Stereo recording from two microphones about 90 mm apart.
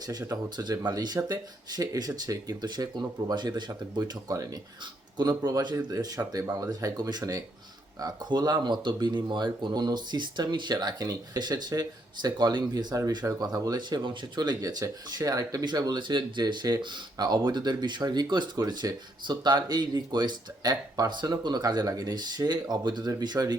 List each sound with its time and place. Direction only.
0.1 s speech: 45° right (ahead or behind)